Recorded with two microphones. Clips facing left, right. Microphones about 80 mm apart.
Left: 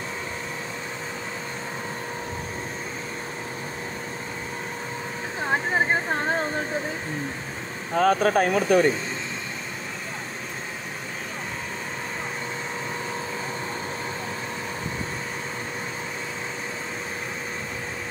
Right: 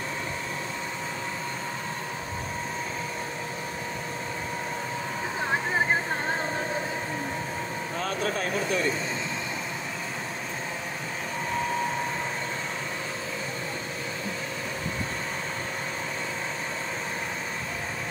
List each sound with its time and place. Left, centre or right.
7.9 s speech: left